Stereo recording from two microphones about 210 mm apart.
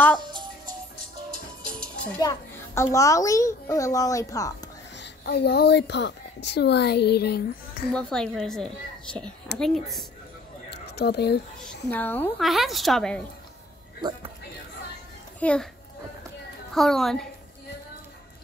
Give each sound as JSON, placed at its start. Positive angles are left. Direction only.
{"t": 0.2, "sound": "music", "side_deg": -20}
{"t": 2.1, "sound": "a child's voice", "side_deg": 15}
{"t": 4.9, "sound": "a woman's voice", "side_deg": 55}
{"t": 7.9, "sound": "a woman's voice", "side_deg": 5}
{"t": 10.7, "sound": "a sound", "side_deg": 50}
{"t": 11.6, "sound": "a woman's voice", "side_deg": 10}
{"t": 14.0, "sound": "speech", "side_deg": -20}
{"t": 15.4, "sound": "a woman's voice", "side_deg": 5}
{"t": 16.7, "sound": "a woman's voice", "side_deg": 0}